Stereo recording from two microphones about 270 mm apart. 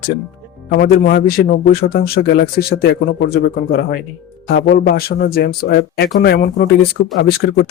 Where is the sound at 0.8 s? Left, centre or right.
Left.